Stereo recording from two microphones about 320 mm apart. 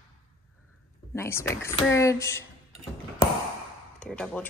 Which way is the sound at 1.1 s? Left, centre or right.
Centre.